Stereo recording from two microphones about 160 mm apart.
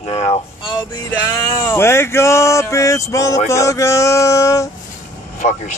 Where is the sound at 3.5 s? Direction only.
20° left (ahead or behind).